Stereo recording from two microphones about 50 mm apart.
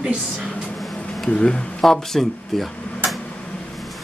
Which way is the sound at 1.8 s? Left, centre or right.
Centre.